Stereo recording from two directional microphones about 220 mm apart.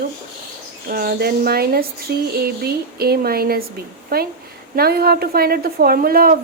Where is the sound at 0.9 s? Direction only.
40° right (ahead or behind).